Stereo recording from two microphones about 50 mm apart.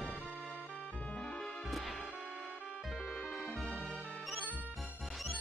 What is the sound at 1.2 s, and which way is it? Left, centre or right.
Music, centre.